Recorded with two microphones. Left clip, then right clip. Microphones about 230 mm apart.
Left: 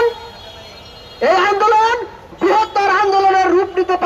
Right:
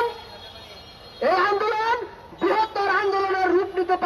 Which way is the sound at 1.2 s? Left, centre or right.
Left.